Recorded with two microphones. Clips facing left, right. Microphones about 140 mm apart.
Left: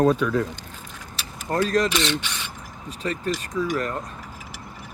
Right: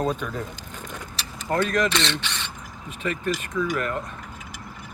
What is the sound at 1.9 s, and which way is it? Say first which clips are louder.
Speech: left 2 dB; 10° left (ahead or behind).